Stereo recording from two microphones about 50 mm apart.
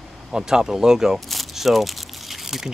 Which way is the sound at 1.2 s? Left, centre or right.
Centre.